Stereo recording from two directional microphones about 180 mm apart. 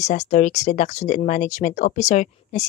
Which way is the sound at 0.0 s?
40° left (ahead or behind).